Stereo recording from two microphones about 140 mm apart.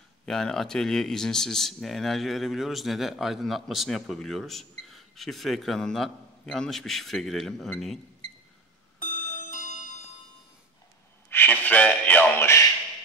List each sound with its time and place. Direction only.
0.2 s speech: 5° left (ahead or behind)
9.0 s music: 70° left (ahead or behind)
11.2 s a sound: 15° left (ahead or behind)